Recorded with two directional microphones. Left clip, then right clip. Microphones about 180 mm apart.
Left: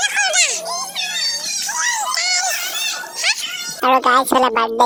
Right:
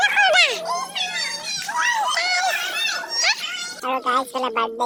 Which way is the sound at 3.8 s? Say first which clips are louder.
Left 9 dB; 50° left (ahead or behind).